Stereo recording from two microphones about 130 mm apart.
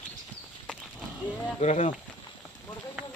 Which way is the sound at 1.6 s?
65° left (ahead or behind).